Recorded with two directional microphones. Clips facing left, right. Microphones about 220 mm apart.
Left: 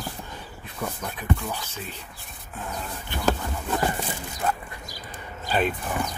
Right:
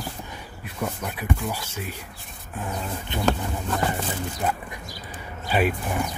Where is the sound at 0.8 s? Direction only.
10° right (ahead or behind).